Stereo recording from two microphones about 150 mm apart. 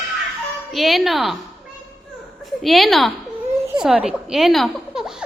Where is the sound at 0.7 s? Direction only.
Centre (ahead or behind).